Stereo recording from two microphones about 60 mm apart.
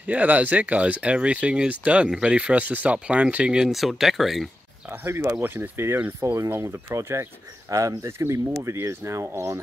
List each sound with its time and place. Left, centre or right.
0.0 s speech: right
3.5 s speech: centre
5.0 s speech: right
6.0 s speech: right